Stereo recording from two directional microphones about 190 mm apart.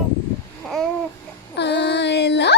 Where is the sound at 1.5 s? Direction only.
65° left (ahead or behind).